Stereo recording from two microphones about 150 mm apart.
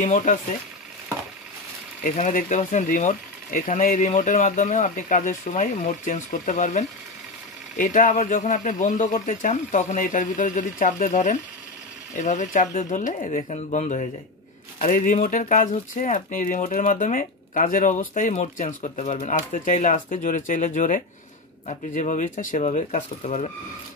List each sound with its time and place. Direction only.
0.0 s speech: 55° left (ahead or behind)
2.0 s speech: 60° left (ahead or behind)